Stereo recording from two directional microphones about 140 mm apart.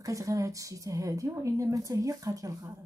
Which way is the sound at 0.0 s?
25° right (ahead or behind).